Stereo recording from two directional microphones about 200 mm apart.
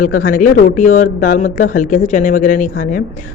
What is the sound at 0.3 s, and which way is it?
Speech, 40° left (ahead or behind).